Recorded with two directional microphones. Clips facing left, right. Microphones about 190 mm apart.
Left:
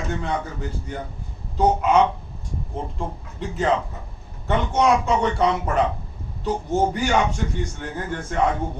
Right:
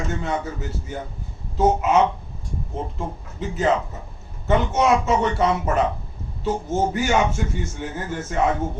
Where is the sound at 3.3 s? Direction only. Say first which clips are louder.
Right 1 dB; centre (ahead or behind).